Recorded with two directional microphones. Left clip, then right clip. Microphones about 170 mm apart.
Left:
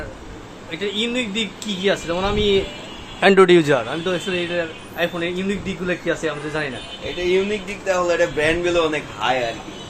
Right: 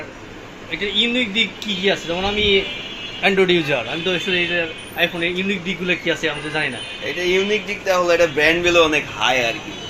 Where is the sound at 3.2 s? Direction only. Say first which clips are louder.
Left 4 dB; 50° left (ahead or behind).